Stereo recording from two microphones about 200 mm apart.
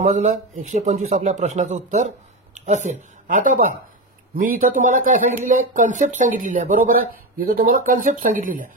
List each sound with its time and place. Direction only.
0.0 s speech: 40° right (ahead or behind)